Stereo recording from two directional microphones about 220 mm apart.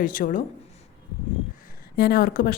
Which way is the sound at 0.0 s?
35° left (ahead or behind).